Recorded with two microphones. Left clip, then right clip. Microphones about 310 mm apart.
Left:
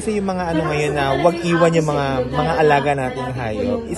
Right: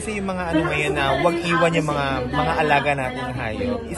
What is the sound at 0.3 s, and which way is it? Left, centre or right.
A man's voice, left.